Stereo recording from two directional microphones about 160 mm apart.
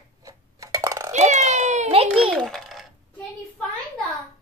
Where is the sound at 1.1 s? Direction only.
45° right (ahead or behind).